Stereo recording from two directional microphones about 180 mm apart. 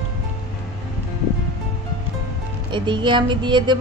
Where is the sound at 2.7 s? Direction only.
25° right (ahead or behind).